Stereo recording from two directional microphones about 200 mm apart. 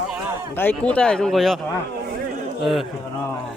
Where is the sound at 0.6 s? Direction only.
5° left (ahead or behind).